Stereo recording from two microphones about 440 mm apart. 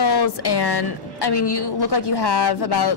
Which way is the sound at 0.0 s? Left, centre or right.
Left.